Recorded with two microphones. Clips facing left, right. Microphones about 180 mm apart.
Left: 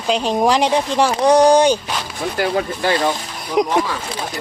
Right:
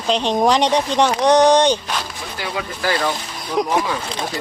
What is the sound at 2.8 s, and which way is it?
Speech, 25° left (ahead or behind).